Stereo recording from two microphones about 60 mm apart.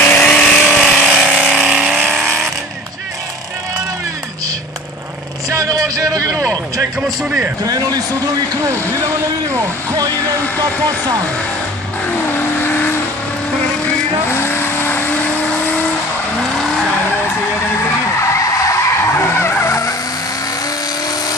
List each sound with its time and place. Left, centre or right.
0.2 s vehicle: centre
0.7 s vehicle: centre
1.5 s vehicle: centre
2.1 s vehicle: centre
5.5 s vehicle: right
7.2 s a man's voice: centre
7.6 s a man's voice: right
14.3 s vehicle: left
18.3 s skidding: left